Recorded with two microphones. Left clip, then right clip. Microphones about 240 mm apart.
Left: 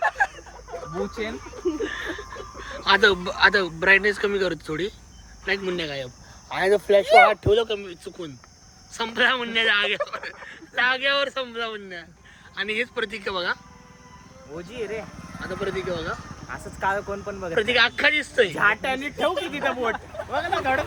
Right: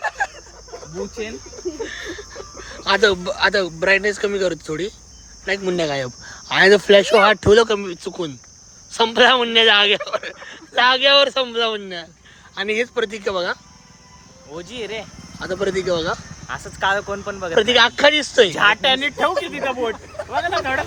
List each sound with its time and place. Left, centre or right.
0.0 s a sound: centre
1.8 s speech: centre
6.5 s speech: right; by 13.6 s centre
14.5 s speech: right
15.4 s speech: right
16.5 s speech: right
17.5 s speech: centre
18.5 s speech: right
19.5 s speech: centre